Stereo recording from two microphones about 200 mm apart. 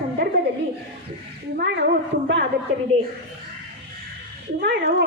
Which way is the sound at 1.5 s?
60° right (ahead or behind).